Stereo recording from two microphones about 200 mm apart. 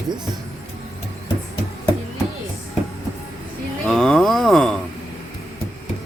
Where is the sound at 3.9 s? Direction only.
Centre (ahead or behind).